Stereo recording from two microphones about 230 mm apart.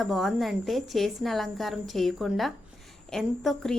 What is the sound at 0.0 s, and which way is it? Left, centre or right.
Speech, centre.